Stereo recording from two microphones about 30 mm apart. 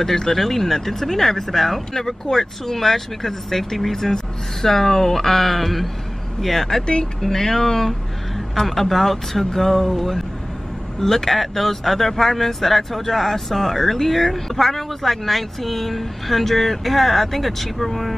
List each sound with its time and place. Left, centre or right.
0.0 s speech: centre